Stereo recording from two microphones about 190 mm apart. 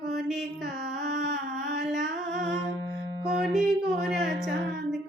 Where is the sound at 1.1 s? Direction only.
55° right (ahead or behind).